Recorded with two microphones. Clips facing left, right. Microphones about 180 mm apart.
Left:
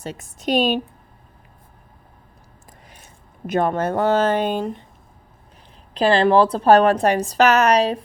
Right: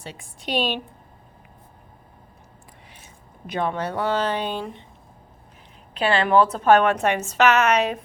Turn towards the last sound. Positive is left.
turn(degrees=35)  # may be behind; listen again after turning